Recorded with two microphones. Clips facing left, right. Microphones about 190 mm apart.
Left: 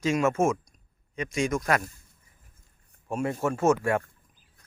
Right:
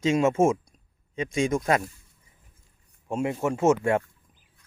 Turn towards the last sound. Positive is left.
turn(degrees=-20)  # may be behind; listen again after turning